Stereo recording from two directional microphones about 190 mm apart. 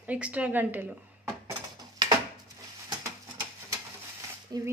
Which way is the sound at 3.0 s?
15° right (ahead or behind).